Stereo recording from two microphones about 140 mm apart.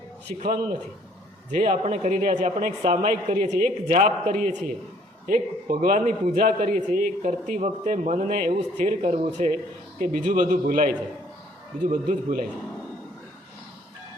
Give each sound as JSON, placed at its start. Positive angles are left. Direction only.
{"t": 1.5, "sound": "a man's voice", "side_deg": -60}
{"t": 1.7, "sound": "a woman's voice", "side_deg": -50}
{"t": 6.3, "sound": "a woman's voice", "side_deg": -75}
{"t": 8.8, "sound": "a woman's voice", "side_deg": -55}
{"t": 10.0, "sound": "a woman's voice", "side_deg": -65}